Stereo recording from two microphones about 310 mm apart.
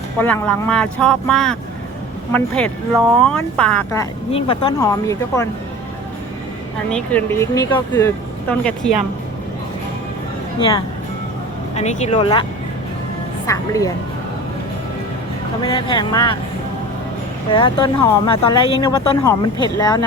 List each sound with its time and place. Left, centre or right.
0.2 s speech: centre
4.3 s speech: centre
6.9 s speech: centre
10.6 s speech: centre
13.5 s speech: centre
15.6 s speech: centre
17.5 s speech: centre